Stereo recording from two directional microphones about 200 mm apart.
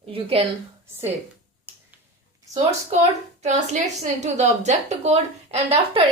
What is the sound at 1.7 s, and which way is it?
Finger snapping, 10° right (ahead or behind).